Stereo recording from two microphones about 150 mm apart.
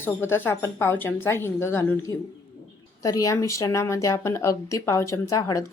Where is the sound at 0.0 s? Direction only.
15° left (ahead or behind).